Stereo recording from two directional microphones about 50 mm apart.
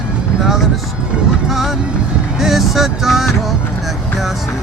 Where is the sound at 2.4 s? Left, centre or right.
Centre.